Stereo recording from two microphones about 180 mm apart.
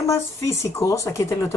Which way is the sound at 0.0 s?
15° left (ahead or behind).